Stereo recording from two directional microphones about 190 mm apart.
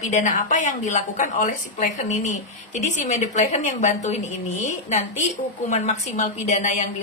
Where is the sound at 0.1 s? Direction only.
40° left (ahead or behind).